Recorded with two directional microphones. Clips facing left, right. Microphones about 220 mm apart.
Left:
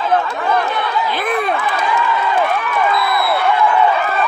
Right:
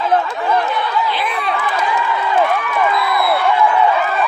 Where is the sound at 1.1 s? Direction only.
50° left (ahead or behind).